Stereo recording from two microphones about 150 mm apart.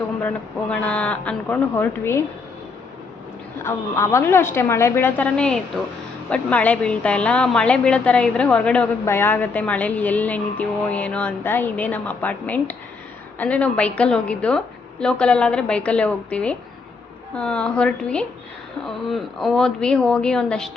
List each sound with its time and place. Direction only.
0.7 s speech: 10° left (ahead or behind)
3.6 s a woman's voice: 15° left (ahead or behind)